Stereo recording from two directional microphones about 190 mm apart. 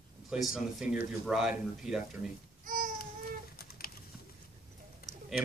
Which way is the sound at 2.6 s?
45° right (ahead or behind).